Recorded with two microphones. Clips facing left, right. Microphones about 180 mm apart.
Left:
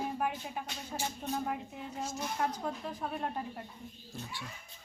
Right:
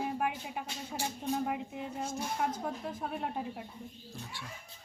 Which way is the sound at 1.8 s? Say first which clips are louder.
Right 2 dB; 55° right (ahead or behind).